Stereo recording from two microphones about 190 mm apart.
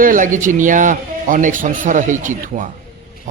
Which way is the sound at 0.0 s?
45° right (ahead or behind).